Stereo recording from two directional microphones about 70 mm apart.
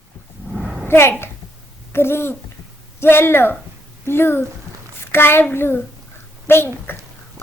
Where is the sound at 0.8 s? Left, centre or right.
Left.